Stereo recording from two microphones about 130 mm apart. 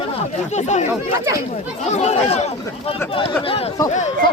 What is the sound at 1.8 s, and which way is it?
Speech, 60° left (ahead or behind).